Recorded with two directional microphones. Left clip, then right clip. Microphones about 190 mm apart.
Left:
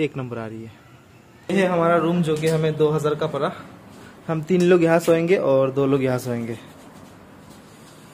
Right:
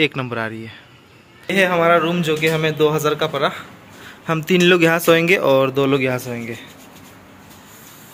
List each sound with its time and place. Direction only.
0.0 s speech: 5° right (ahead or behind); by 6.6 s 15° left (ahead or behind)